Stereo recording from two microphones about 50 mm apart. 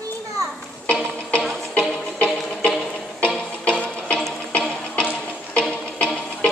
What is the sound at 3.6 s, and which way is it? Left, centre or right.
Music, left.